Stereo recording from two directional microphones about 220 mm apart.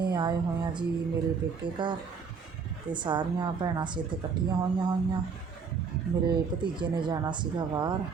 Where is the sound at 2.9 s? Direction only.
20° right (ahead or behind).